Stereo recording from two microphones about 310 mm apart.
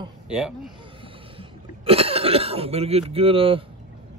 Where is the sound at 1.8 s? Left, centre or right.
Centre.